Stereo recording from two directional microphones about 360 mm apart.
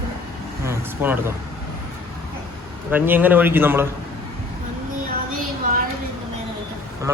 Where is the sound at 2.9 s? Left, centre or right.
Centre.